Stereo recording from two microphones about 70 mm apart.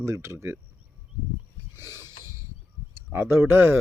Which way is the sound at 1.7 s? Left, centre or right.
Right.